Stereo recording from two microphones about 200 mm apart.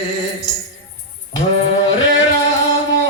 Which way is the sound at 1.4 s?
40° left (ahead or behind).